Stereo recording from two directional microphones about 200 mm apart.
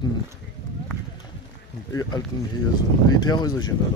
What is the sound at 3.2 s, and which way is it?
Speech, 20° left (ahead or behind).